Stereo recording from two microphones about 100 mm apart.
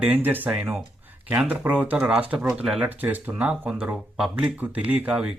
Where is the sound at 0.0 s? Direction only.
20° right (ahead or behind).